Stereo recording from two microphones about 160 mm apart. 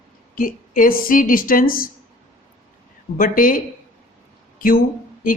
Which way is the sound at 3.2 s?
60° left (ahead or behind).